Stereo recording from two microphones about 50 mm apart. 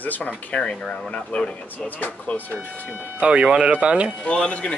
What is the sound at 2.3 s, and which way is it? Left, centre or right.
Speech, left.